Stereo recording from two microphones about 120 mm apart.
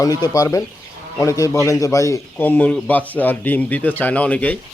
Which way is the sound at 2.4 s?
15° left (ahead or behind).